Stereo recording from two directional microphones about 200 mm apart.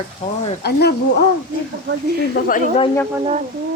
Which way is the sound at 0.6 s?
55° left (ahead or behind).